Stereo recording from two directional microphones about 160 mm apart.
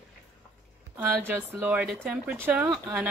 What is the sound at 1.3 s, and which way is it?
Speech, 10° right (ahead or behind).